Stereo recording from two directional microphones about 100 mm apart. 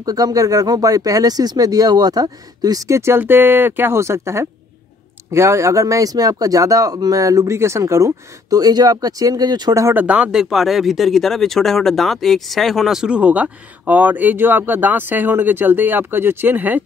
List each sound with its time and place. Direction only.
0.0 s speech: 40° right (ahead or behind)
9.9 s speech: 10° right (ahead or behind)